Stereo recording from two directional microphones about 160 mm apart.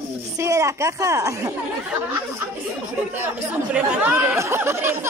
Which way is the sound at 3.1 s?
10° right (ahead or behind).